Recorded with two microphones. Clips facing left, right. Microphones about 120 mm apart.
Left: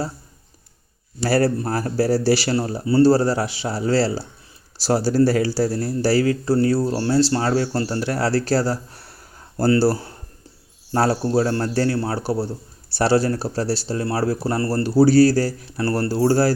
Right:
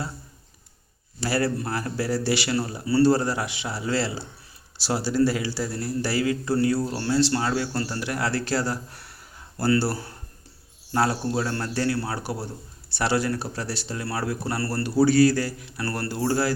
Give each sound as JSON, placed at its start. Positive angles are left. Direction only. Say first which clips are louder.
{"t": 1.2, "sound": "speech", "louder": "left 6 dB", "side_deg": 40}